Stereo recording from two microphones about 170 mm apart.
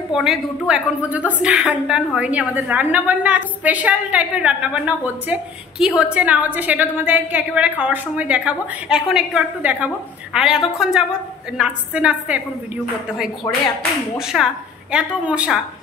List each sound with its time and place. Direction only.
0.1 s a woman's voice: centre (ahead or behind)
14.1 s a woman's voice: 5° right (ahead or behind)